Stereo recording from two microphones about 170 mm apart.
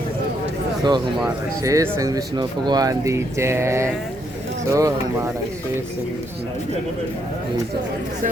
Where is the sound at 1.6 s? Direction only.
20° right (ahead or behind).